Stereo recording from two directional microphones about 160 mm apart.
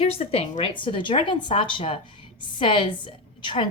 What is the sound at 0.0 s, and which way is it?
A woman's voice, 40° left (ahead or behind).